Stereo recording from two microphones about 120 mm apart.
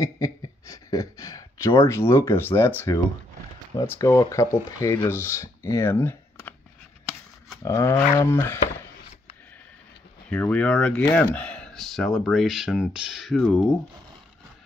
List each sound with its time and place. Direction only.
0.0 s a sound: 30° left (ahead or behind)
1.8 s speech: 20° left (ahead or behind)
3.8 s speech: 25° left (ahead or behind)
7.6 s speech: 25° left (ahead or behind)
10.3 s speech: 10° left (ahead or behind)